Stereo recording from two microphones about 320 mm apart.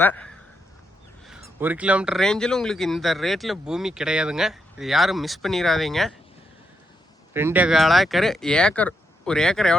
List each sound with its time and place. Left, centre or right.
0.0 s speech: centre
1.5 s speech: centre
7.3 s speech: centre